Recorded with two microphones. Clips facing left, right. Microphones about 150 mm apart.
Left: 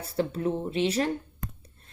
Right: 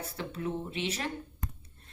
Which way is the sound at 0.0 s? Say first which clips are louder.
Left 8 dB; 35° left (ahead or behind).